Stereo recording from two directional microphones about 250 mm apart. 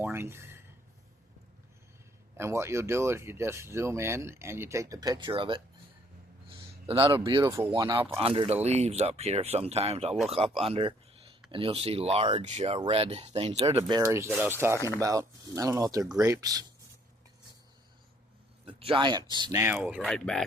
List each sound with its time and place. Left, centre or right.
0.0 s a sound: centre
2.4 s speech: centre
6.8 s speech: right
18.6 s speech: right; by 20.4 s centre